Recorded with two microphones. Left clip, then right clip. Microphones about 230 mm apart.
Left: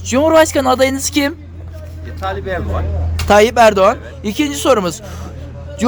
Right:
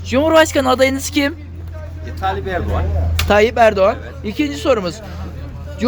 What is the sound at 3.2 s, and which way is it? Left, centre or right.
A man's voice, centre.